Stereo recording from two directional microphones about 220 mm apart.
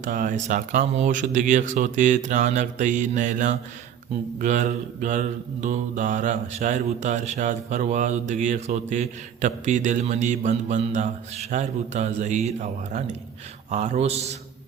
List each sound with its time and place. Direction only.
0.0 s mantra: 35° right (ahead or behind)
13.7 s a man's voice: 30° right (ahead or behind)